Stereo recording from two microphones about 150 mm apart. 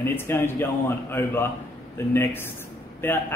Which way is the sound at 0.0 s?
15° left (ahead or behind).